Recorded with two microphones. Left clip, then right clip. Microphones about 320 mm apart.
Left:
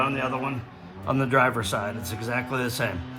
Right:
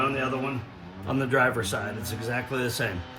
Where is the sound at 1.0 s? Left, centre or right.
Centre.